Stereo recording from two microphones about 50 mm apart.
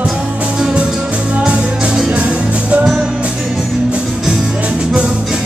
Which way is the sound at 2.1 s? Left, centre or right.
Right.